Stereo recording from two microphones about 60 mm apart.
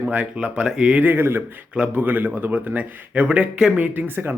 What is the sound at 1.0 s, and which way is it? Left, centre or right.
Speech, right.